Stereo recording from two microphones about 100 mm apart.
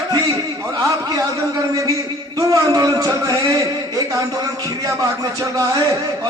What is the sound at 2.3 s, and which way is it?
A man's voice, 40° right (ahead or behind).